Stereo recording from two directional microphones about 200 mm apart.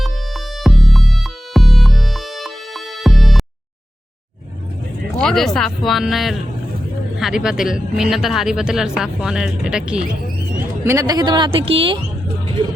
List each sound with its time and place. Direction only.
0.0 s music: centre (ahead or behind)
5.1 s speech: centre (ahead or behind)
10.8 s speech: 20° right (ahead or behind)